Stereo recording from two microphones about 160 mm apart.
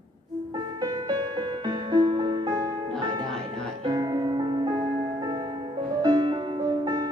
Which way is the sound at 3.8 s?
25° right (ahead or behind).